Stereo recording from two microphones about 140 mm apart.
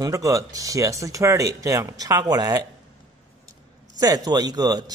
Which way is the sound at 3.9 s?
25° right (ahead or behind).